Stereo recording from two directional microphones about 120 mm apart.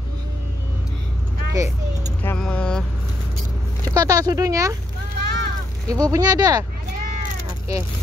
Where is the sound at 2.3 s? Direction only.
5° left (ahead or behind).